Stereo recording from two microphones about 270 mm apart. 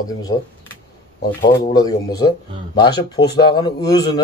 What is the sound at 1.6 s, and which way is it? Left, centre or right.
A man's voice, centre.